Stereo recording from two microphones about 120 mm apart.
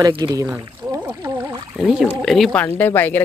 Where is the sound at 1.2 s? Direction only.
30° right (ahead or behind).